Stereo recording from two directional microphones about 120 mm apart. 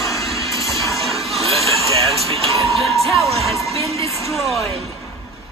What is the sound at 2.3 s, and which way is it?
Music, 55° right (ahead or behind).